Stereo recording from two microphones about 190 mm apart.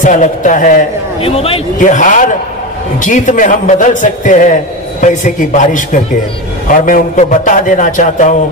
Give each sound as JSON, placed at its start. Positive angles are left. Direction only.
{"t": 0.0, "sound": "a man's voice", "side_deg": 40}
{"t": 1.2, "sound": "a man's voice", "side_deg": 30}